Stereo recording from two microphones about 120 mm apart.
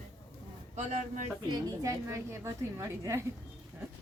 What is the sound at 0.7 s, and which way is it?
Speech, 70° right (ahead or behind).